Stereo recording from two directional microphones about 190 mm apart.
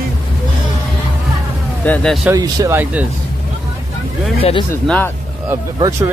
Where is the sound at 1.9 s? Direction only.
5° left (ahead or behind).